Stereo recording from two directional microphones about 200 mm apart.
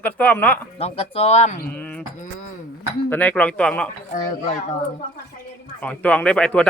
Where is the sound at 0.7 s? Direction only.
30° left (ahead or behind).